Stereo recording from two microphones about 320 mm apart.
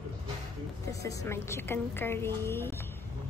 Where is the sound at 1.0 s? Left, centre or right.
Centre.